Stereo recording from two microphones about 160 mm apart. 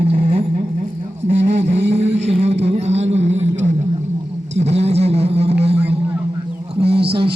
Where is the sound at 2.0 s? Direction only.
40° right (ahead or behind).